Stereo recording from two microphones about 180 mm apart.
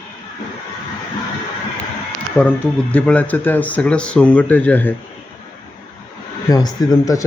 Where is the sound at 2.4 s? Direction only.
10° left (ahead or behind).